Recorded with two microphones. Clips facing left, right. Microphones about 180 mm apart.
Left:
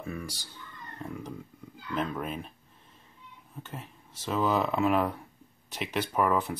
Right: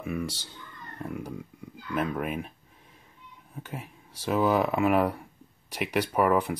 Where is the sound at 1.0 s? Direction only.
5° right (ahead or behind).